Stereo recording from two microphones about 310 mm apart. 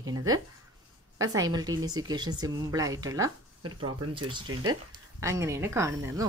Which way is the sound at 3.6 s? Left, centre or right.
Right.